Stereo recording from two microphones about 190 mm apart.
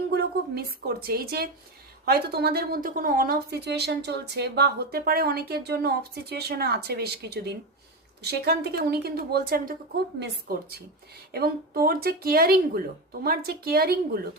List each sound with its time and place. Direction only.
0.1 s a woman's voice: 55° right (ahead or behind)